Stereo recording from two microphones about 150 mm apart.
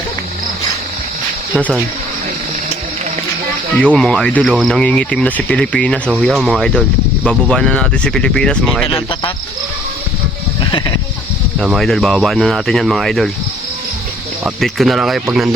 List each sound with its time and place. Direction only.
3.9 s speech: 5° left (ahead or behind)
8.9 s speech: 35° left (ahead or behind)
10.6 s sheep: 30° left (ahead or behind)
11.6 s speech: centre (ahead or behind)
14.4 s speech: centre (ahead or behind)